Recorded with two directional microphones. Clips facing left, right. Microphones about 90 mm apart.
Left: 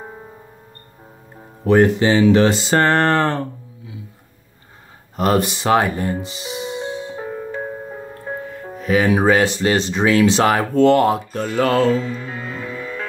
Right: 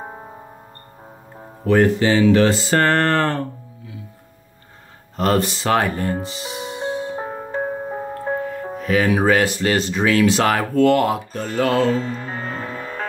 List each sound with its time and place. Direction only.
1.6 s speech: 20° left (ahead or behind)
5.1 s speech: 15° left (ahead or behind)
6.2 s music: 20° left (ahead or behind)
7.0 s music: 35° right (ahead or behind)
8.8 s speech: 20° left (ahead or behind)
11.5 s music: 40° left (ahead or behind)
11.9 s music: 40° right (ahead or behind)